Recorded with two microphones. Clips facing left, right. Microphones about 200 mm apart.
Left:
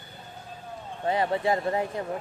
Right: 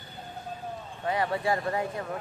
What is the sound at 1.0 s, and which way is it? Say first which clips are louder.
Speech: left 3 dB; 25° left (ahead or behind).